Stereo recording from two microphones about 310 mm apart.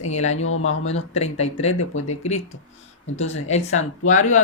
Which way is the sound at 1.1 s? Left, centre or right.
Centre.